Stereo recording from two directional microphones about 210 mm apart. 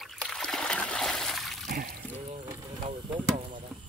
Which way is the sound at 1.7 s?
45° right (ahead or behind).